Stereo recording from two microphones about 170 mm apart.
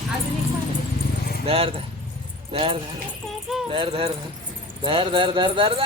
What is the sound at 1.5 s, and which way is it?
Speech, 35° right (ahead or behind).